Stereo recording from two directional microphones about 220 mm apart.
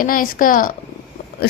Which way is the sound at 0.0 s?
40° left (ahead or behind).